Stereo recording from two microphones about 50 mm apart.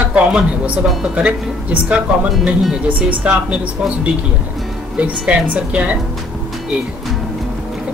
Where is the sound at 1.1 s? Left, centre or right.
Right.